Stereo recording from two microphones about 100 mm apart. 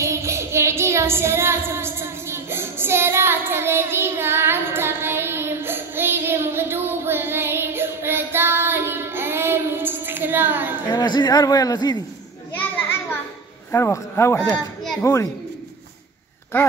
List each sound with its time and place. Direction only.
0.0 s child singing: 30° right (ahead or behind)
10.9 s a man's voice: 45° left (ahead or behind)
12.5 s children playing: 20° left (ahead or behind)
13.7 s a child's voice: 25° left (ahead or behind)